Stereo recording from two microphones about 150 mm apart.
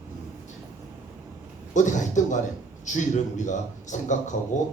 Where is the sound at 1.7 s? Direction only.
55° left (ahead or behind).